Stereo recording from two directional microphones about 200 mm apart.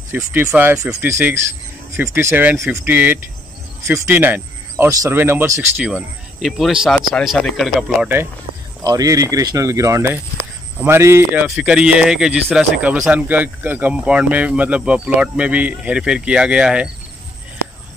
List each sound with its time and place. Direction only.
0.1 s speech: 10° right (ahead or behind)